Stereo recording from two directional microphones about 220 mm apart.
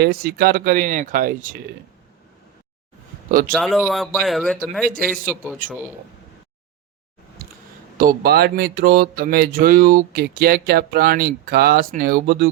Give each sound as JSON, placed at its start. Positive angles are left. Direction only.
{"t": 0.0, "sound": "speech", "side_deg": -45}
{"t": 3.5, "sound": "a man's voice", "side_deg": 0}
{"t": 7.4, "sound": "a sound", "side_deg": -40}
{"t": 7.9, "sound": "speech", "side_deg": -40}